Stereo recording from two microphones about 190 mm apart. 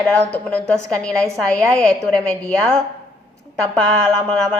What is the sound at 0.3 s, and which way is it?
A woman's voice, 10° left (ahead or behind).